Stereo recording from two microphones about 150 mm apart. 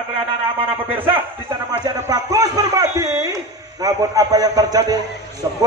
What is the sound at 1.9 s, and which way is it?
A man's voice, 25° right (ahead or behind).